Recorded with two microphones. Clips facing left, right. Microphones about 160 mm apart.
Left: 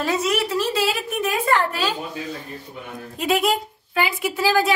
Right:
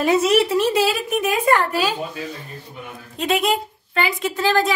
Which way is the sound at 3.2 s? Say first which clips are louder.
Even; 5° left (ahead or behind).